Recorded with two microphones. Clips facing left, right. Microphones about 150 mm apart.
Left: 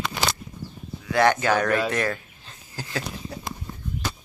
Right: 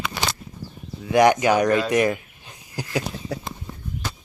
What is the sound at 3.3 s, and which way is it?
Horse, 90° right.